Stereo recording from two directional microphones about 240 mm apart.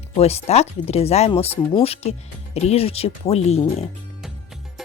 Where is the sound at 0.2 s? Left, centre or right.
Left.